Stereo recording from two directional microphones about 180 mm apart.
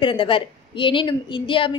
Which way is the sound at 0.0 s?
30° left (ahead or behind).